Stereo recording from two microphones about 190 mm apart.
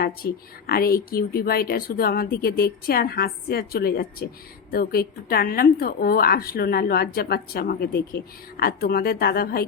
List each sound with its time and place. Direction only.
0.0 s a woman's voice: 50° left (ahead or behind)